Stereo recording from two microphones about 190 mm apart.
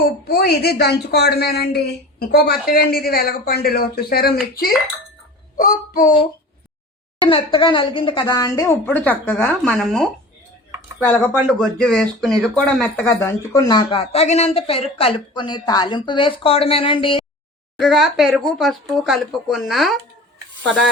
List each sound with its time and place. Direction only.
0.3 s a woman's voice: 60° left (ahead or behind)
5.5 s a child's voice: 45° left (ahead or behind)
7.2 s speech: 25° left (ahead or behind)
17.7 s speech: centre (ahead or behind)